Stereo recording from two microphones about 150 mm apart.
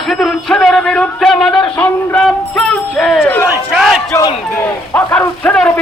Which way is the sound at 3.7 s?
Centre (ahead or behind).